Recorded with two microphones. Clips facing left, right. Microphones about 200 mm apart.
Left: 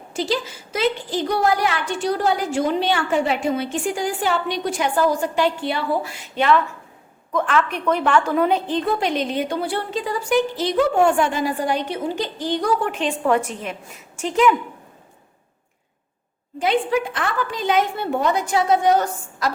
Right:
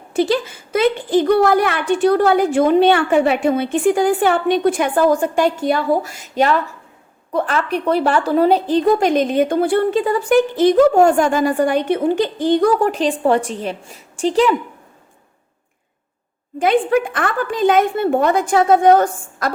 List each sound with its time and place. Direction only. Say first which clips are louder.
0.1 s a woman's voice: right 7 dB; 55° right (ahead or behind)
12.9 s a woman's voice: right 4 dB; 35° right (ahead or behind)
16.6 s a woman's voice: right 5 dB; 50° right (ahead or behind)